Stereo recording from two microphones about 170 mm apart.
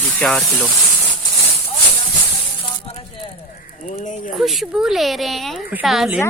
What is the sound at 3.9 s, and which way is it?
Speech, 45° left (ahead or behind).